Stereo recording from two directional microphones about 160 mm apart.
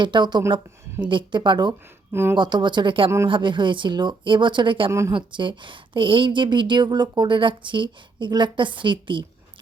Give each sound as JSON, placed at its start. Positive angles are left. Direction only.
{"t": 0.0, "sound": "speech", "side_deg": -30}
{"t": 4.9, "sound": "a woman's voice", "side_deg": -20}
{"t": 5.1, "sound": "a woman's voice", "side_deg": -30}